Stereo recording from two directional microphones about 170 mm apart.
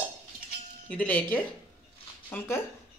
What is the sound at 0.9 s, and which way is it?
Speech, 5° left (ahead or behind).